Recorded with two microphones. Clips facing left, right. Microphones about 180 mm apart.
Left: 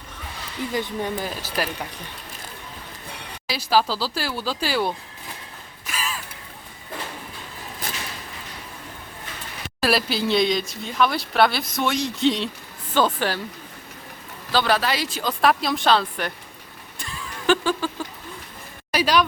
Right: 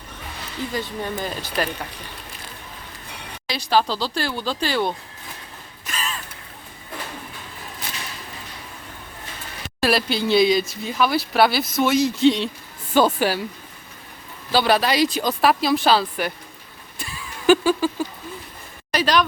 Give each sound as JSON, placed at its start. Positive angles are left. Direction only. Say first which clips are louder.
{"t": 0.7, "sound": "speech", "louder": "left 3 dB", "side_deg": 20}
{"t": 1.2, "sound": "speech", "louder": "right 2 dB", "side_deg": 5}
{"t": 3.4, "sound": "speech", "louder": "right 1 dB", "side_deg": 5}
{"t": 5.9, "sound": "a sound", "louder": "even", "side_deg": 5}
{"t": 9.8, "sound": "speech", "louder": "right 1 dB", "side_deg": 0}
{"t": 14.5, "sound": "speech", "louder": "right 3 dB", "side_deg": -15}
{"t": 17.0, "sound": "a sound", "louder": "even", "side_deg": -10}
{"t": 18.9, "sound": "speech", "louder": "even", "side_deg": 10}